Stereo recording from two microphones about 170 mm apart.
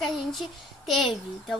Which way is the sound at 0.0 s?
Centre (ahead or behind).